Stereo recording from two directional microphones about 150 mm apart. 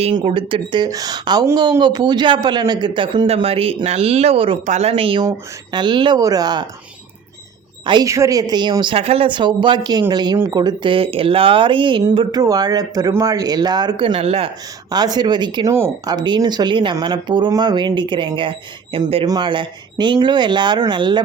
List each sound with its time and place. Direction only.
0.0 s speech: 35° right (ahead or behind)
7.9 s speech: 25° right (ahead or behind); by 14.5 s 40° right (ahead or behind)
14.8 s speech: 25° right (ahead or behind)
15.7 s speech: 15° right (ahead or behind)
16.1 s speech: 30° right (ahead or behind)